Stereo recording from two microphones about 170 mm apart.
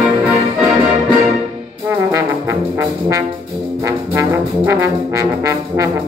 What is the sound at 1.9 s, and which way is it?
Trombone, 15° right (ahead or behind).